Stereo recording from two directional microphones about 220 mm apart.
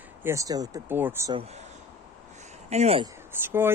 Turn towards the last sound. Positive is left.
turn(degrees=-10)  # may be behind; listen again after turning